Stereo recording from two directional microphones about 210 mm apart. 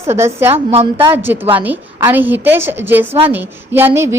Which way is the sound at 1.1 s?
10° right (ahead or behind).